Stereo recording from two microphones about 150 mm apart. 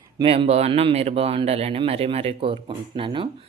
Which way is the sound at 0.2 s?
40° right (ahead or behind).